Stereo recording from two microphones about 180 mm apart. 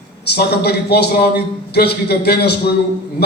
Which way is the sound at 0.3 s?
65° left (ahead or behind).